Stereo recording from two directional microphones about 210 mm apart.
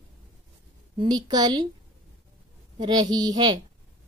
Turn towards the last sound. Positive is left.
turn(degrees=-20)  # may be behind; listen again after turning